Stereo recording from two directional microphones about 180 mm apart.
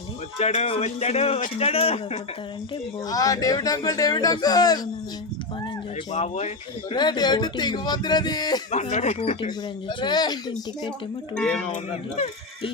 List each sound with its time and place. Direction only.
0.3 s speech: 35° left (ahead or behind)
3.1 s speech: 20° left (ahead or behind)
6.1 s speech: 40° left (ahead or behind)
6.9 s speech: 25° left (ahead or behind)
8.7 s speech: 40° left (ahead or behind)
10.0 s speech: 25° left (ahead or behind)
11.3 s speech: 5° left (ahead or behind)
11.7 s speech: 40° left (ahead or behind)